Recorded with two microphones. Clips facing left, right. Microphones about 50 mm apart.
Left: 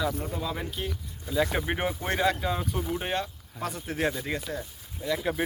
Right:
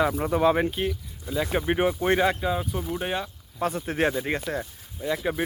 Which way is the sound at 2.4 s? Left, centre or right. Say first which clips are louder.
Right 2 dB; centre.